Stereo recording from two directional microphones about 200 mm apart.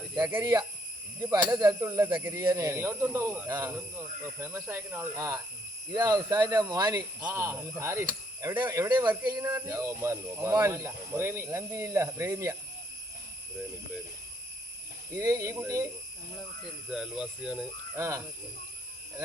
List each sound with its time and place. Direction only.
0.3 s speech: 15° right (ahead or behind)
7.2 s speech: 10° right (ahead or behind)
15.1 s speech: 15° right (ahead or behind)
16.9 s speech: 5° right (ahead or behind)